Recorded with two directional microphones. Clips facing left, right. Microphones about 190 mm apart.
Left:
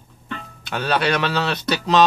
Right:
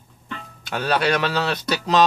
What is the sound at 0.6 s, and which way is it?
Speech, 40° right (ahead or behind).